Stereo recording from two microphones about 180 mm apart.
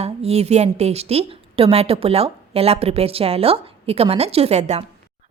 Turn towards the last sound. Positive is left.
turn(degrees=-40)  # may be behind; listen again after turning